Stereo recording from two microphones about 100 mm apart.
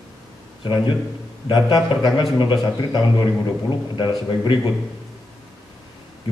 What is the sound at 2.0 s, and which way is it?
A man's voice, 50° left (ahead or behind).